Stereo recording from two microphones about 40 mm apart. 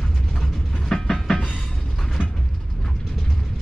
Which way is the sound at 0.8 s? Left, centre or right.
Centre.